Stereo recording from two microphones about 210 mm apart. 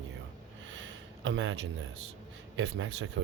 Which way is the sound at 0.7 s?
60° right (ahead or behind).